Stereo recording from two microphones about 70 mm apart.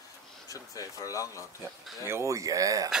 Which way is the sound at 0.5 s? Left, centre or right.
Left.